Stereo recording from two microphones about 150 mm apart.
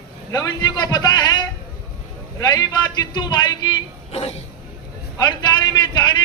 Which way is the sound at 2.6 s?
25° left (ahead or behind).